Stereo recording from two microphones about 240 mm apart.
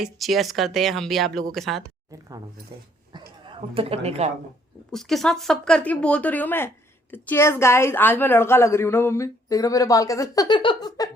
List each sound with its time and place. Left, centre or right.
0.0 s speech: centre
3.1 s a sound: centre
4.9 s a woman's voice: centre